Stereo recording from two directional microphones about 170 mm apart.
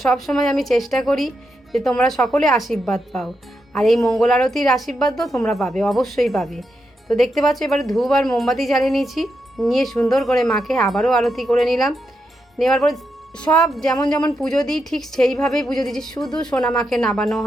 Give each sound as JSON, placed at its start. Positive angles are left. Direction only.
{"t": 0.0, "sound": "a woman's voice", "side_deg": 0}
{"t": 13.9, "sound": "speech", "side_deg": 20}
{"t": 14.3, "sound": "a woman's voice", "side_deg": 5}